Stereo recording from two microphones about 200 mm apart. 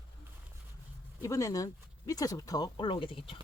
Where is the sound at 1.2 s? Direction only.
15° left (ahead or behind).